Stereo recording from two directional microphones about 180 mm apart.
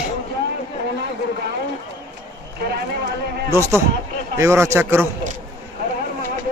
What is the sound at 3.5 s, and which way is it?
A man's voice, 15° right (ahead or behind).